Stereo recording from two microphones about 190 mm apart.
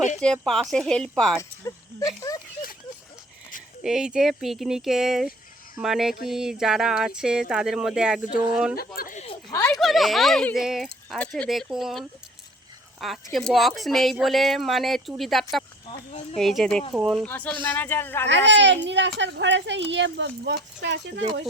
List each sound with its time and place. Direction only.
0.2 s speech: 5° left (ahead or behind)
1.4 s a sound: 15° left (ahead or behind)
2.3 s speech: 20° left (ahead or behind)
3.8 s speech: 5° right (ahead or behind)
9.0 s a sound: 45° left (ahead or behind)
9.5 s speech: 15° left (ahead or behind)
9.8 s speech: centre (ahead or behind)
17.2 s speech: 10° left (ahead or behind)
18.3 s a child's voice: 70° right (ahead or behind)